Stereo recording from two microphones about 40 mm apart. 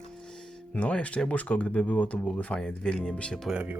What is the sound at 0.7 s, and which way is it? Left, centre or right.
Speech, left.